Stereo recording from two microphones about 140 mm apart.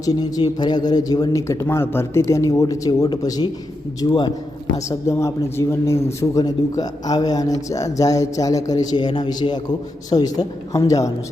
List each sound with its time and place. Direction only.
0.0 s a man's voice: 25° left (ahead or behind)
4.9 s speech: 20° left (ahead or behind)